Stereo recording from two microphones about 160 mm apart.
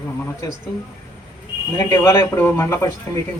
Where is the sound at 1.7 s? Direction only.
15° left (ahead or behind).